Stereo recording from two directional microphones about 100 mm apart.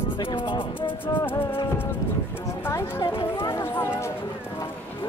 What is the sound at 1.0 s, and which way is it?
Music, 20° left (ahead or behind).